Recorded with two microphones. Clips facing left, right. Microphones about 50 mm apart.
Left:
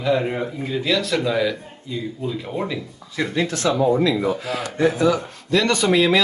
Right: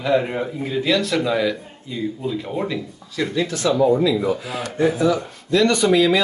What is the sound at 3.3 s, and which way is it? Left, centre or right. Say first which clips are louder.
Speech: right 1 dB; left.